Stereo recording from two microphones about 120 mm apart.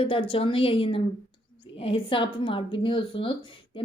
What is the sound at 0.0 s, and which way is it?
A woman's voice, 50° left (ahead or behind).